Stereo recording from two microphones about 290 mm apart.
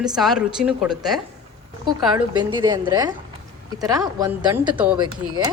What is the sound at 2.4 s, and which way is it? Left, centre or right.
Speech, centre.